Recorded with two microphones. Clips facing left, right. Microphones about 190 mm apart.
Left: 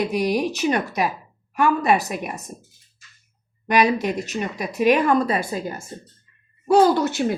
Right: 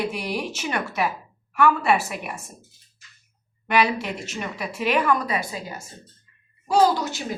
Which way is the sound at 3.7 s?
40° left (ahead or behind).